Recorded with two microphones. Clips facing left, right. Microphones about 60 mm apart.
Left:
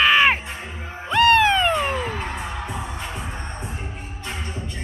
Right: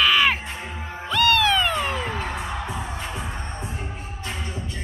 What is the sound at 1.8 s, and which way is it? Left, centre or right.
Cat, left.